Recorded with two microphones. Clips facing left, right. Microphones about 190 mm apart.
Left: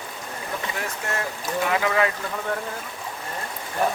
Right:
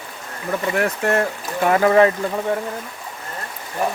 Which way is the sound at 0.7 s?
65° right (ahead or behind).